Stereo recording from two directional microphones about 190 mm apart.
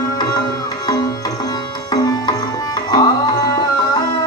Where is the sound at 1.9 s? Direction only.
20° left (ahead or behind).